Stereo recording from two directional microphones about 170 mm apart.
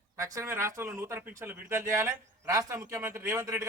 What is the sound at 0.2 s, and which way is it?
Speech, 15° right (ahead or behind).